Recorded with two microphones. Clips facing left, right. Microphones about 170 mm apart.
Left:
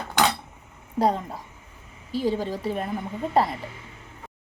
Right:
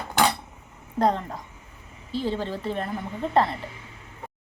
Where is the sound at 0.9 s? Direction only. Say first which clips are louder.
Even; 10° left (ahead or behind).